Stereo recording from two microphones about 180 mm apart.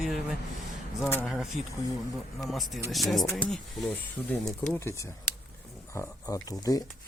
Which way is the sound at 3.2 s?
20° left (ahead or behind).